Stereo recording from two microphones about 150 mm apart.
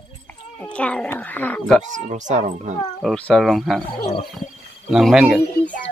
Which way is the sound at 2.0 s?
50° right (ahead or behind).